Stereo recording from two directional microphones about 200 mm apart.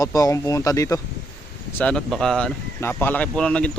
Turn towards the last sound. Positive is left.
turn(degrees=5)  # may be behind; listen again after turning